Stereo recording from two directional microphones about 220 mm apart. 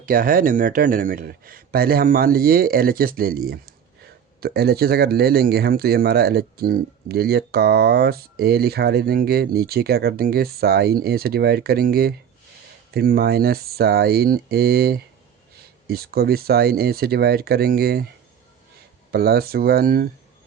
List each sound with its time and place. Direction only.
0.0 s speech: 40° right (ahead or behind)
19.1 s speech: 45° right (ahead or behind)